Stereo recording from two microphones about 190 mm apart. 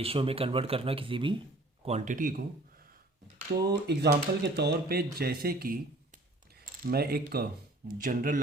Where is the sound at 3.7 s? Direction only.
60° right (ahead or behind).